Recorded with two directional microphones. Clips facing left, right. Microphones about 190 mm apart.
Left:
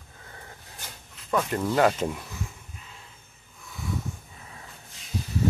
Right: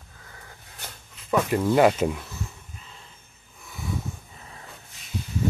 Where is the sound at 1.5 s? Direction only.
10° right (ahead or behind).